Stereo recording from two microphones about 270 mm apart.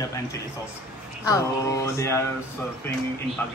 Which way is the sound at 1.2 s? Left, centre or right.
Centre.